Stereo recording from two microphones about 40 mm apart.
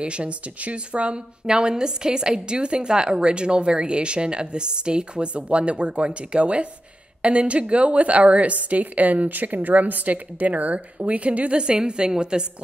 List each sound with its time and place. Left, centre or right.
0.0 s a woman's voice: right